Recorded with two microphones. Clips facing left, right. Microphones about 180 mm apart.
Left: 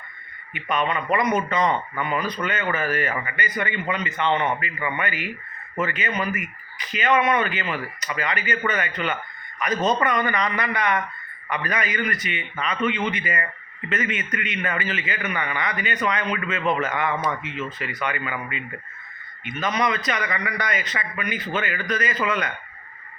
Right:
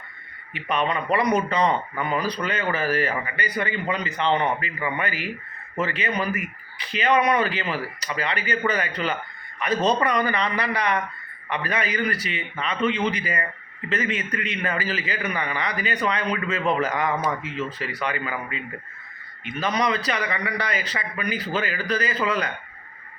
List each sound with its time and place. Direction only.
0.5 s a man's voice: 35° right (ahead or behind)